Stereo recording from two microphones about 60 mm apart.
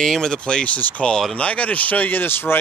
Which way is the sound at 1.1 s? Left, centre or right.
Centre.